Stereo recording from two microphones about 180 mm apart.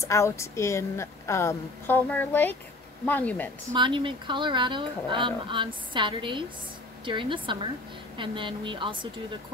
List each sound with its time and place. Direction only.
0.0 s a woman's voice: 15° left (ahead or behind)
3.7 s speech: 25° right (ahead or behind)